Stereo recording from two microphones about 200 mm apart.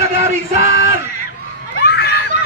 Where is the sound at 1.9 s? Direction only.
55° left (ahead or behind).